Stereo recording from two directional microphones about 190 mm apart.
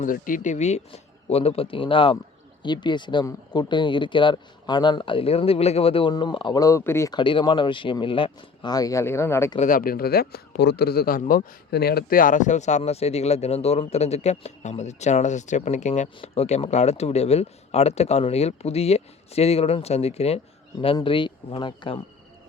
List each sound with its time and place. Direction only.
0.0 s speech: 45° left (ahead or behind); by 9.6 s 15° left (ahead or behind)
9.6 s speech: 45° left (ahead or behind); by 22.0 s 25° left (ahead or behind)